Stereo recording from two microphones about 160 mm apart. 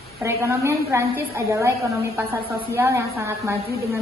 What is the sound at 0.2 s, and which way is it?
A woman's voice, 15° right (ahead or behind).